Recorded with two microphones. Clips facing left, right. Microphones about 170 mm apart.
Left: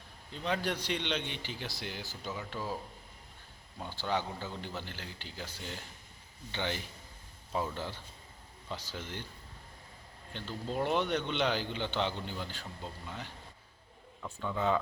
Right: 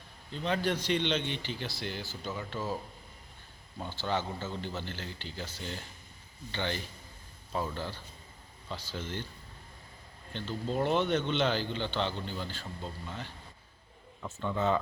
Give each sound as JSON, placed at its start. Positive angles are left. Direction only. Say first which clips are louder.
{"t": 0.3, "sound": "a man's voice", "louder": "right 3 dB", "side_deg": 5}
{"t": 2.3, "sound": "a man's voice", "louder": "right 2 dB", "side_deg": 0}
{"t": 3.8, "sound": "a man's voice", "louder": "right 1 dB", "side_deg": 10}
{"t": 10.3, "sound": "a man's voice", "louder": "right 3 dB", "side_deg": 5}
{"t": 12.8, "sound": "a man's voice", "louder": "right 2 dB", "side_deg": 5}
{"t": 14.3, "sound": "a man's voice", "louder": "right 2 dB", "side_deg": 5}